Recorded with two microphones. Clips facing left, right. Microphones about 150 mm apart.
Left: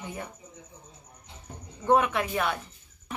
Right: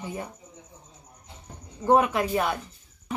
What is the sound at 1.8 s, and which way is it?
Speech, 35° right (ahead or behind).